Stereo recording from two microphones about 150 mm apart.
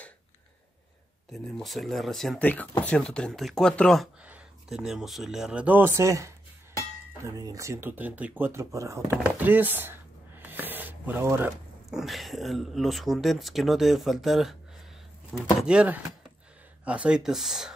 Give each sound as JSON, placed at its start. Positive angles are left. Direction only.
{"t": 1.3, "sound": "speech", "side_deg": 0}
{"t": 4.2, "sound": "speech", "side_deg": -5}
{"t": 9.1, "sound": "chopping", "side_deg": -10}
{"t": 11.9, "sound": "speech", "side_deg": 0}